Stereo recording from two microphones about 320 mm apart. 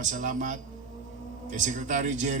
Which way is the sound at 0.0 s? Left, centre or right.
Right.